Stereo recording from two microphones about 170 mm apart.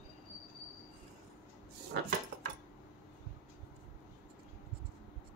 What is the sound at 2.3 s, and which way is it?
Cutlery, 90° right.